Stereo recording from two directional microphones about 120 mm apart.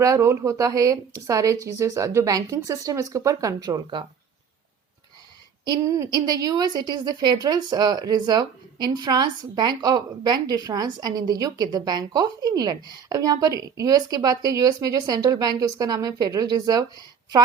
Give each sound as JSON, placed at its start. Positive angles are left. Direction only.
{"t": 0.0, "sound": "a woman's voice", "side_deg": -25}
{"t": 6.0, "sound": "a woman's voice", "side_deg": -30}